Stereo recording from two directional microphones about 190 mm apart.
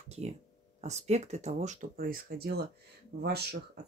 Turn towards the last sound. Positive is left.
turn(degrees=-55)  # may be behind; listen again after turning